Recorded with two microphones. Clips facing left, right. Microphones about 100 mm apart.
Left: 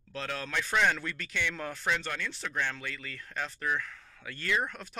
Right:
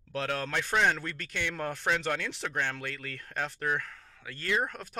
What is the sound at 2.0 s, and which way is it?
Speech, 75° right (ahead or behind).